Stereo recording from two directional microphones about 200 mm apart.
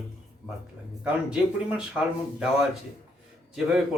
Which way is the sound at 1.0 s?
5° right (ahead or behind).